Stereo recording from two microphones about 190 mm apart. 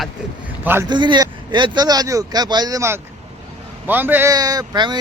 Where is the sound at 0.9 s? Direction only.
25° right (ahead or behind).